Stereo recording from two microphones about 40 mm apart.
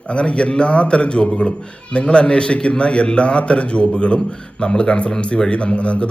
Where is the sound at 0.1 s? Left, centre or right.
Left.